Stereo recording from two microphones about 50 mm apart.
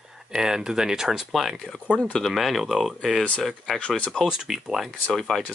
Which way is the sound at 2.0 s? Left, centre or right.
Centre.